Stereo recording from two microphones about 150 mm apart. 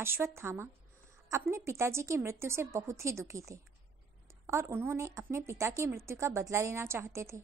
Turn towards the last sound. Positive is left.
turn(degrees=-20)  # may be behind; listen again after turning